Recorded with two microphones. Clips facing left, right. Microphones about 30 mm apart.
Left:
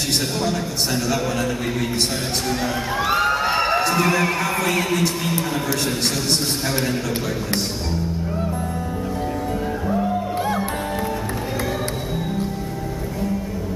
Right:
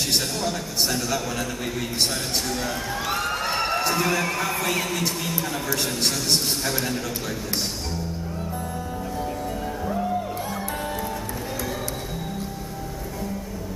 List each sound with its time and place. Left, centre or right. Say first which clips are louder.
0.4 s a man's voice: left 3 dB; centre
9.8 s music: left 4 dB; centre